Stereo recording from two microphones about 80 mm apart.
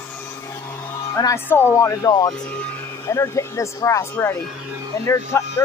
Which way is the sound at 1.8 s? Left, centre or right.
Left.